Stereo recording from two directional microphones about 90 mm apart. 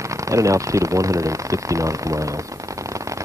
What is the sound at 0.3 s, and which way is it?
Speech, 35° right (ahead or behind).